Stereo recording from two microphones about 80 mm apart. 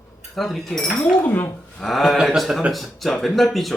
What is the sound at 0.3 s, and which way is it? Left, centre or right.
Speech, centre.